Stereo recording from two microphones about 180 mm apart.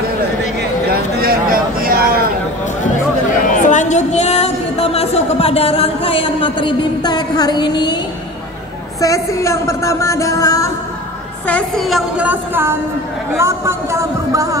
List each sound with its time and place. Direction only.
0.6 s a sound: 55° right (ahead or behind)
3.4 s speech: 45° left (ahead or behind); by 8.0 s 25° left (ahead or behind)
9.0 s speech: 15° left (ahead or behind)
11.4 s a woman's voice: 5° left (ahead or behind); by 14.6 s 20° right (ahead or behind)